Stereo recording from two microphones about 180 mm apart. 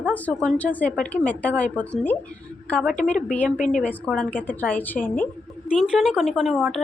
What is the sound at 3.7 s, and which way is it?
A woman's voice, 5° left (ahead or behind).